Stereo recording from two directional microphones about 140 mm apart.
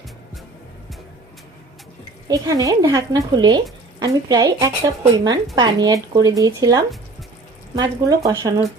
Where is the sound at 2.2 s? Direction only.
25° right (ahead or behind).